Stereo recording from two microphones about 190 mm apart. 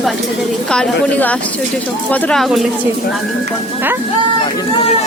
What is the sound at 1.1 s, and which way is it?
Speech, 5° left (ahead or behind).